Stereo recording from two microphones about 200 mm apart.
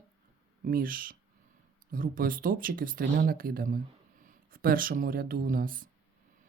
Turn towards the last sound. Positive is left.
turn(degrees=-45)  # may be behind; listen again after turning